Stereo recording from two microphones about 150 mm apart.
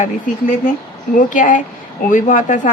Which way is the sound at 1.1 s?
60° left (ahead or behind).